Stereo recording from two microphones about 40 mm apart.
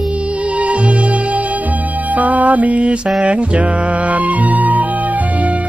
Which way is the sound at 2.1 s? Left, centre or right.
Right.